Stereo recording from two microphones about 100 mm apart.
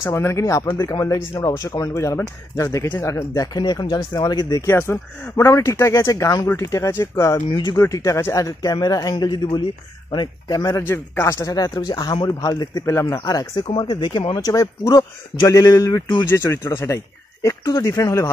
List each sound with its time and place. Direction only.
0.0 s a man's voice: 25° left (ahead or behind)
3.3 s speech: 40° left (ahead or behind)
4.6 s a man's voice: 25° left (ahead or behind)
7.4 s speech: 50° left (ahead or behind)
7.7 s a man's voice: 30° left (ahead or behind)
10.8 s a man's voice: 25° left (ahead or behind)
13.8 s speech: 50° left (ahead or behind)
14.3 s a man's voice: 35° left (ahead or behind)